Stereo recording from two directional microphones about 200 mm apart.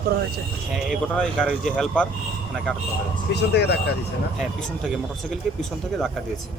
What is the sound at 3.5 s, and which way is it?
Speech, 55° left (ahead or behind).